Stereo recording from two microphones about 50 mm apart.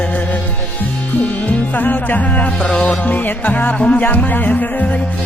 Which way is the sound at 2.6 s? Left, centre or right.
Left.